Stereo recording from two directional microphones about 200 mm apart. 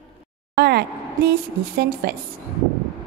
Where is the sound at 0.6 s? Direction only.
55° right (ahead or behind).